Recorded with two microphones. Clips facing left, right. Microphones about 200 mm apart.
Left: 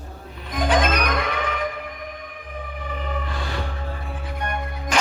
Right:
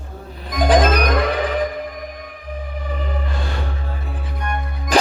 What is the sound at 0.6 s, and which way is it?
Music, 35° right (ahead or behind).